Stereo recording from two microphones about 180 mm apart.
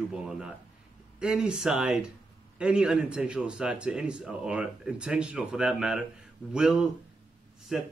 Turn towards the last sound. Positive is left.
turn(degrees=0)  # may be behind; listen again after turning